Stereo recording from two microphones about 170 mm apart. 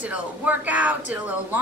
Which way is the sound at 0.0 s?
10° right (ahead or behind).